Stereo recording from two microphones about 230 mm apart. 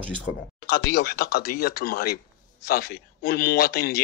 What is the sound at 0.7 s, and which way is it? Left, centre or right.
Speech, left.